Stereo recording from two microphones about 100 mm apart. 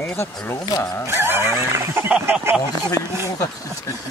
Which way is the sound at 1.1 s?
25° right (ahead or behind).